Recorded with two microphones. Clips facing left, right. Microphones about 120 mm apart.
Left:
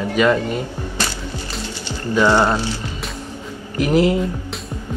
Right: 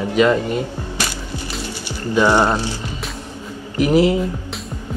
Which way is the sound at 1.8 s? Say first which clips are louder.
Even; 15° right (ahead or behind).